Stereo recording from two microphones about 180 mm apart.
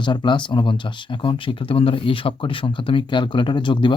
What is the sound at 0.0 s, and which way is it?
Speech, 25° left (ahead or behind).